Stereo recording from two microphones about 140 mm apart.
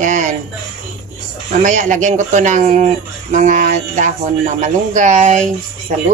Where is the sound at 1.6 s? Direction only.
60° right (ahead or behind).